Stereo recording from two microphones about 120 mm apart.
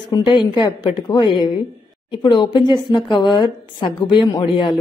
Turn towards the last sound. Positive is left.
turn(degrees=40)  # may be behind; listen again after turning